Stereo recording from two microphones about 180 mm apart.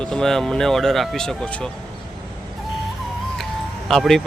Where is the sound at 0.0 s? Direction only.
5° left (ahead or behind).